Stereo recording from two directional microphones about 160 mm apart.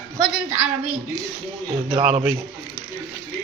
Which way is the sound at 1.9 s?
40° right (ahead or behind).